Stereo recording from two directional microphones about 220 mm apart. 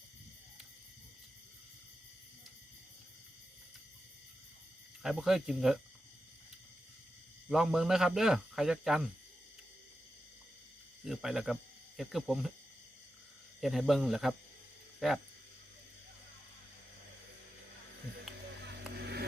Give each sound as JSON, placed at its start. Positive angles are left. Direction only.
{"t": 5.0, "sound": "speech", "side_deg": 0}
{"t": 7.5, "sound": "speech", "side_deg": 0}
{"t": 11.0, "sound": "speech", "side_deg": 0}
{"t": 13.6, "sound": "speech", "side_deg": 0}
{"t": 18.6, "sound": "vehicle", "side_deg": -50}